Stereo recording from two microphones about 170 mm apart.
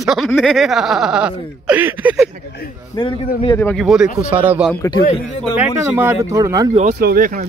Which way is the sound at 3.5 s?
10° left (ahead or behind).